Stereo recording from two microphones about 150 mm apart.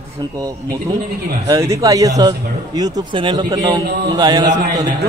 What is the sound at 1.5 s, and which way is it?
Speech, 20° right (ahead or behind).